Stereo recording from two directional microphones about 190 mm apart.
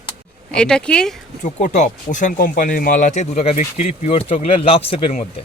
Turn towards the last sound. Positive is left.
turn(degrees=30)  # may be behind; listen again after turning